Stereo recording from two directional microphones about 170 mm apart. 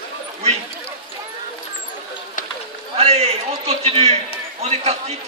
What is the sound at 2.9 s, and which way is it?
A man's voice, 40° right (ahead or behind).